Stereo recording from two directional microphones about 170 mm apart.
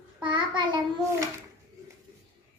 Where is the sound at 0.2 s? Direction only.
25° right (ahead or behind).